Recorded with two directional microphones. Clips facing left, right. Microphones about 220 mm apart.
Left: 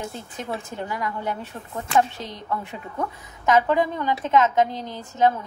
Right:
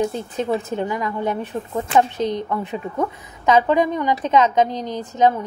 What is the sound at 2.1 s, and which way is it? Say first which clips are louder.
A woman's voice: right 9 dB; 20° right (ahead or behind).